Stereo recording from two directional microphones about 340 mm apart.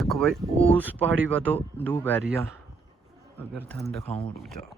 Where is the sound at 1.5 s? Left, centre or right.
Centre.